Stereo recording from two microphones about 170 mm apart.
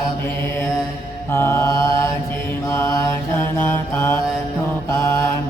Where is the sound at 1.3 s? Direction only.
15° left (ahead or behind).